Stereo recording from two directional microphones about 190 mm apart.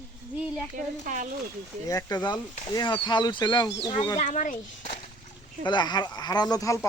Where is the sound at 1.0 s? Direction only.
45° right (ahead or behind).